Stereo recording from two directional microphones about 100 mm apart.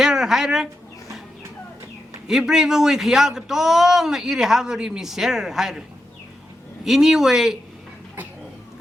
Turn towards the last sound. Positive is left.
turn(degrees=-5)  # may be behind; listen again after turning